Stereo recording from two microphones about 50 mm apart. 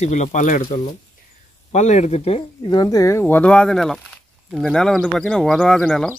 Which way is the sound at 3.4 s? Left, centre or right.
Centre.